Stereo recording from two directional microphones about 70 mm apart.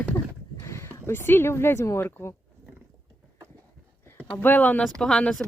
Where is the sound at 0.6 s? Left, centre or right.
Left.